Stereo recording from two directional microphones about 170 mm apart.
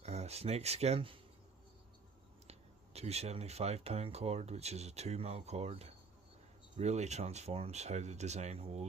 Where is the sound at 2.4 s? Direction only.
40° right (ahead or behind).